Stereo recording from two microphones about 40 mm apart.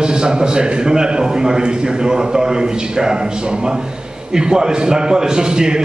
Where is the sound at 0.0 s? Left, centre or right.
Right.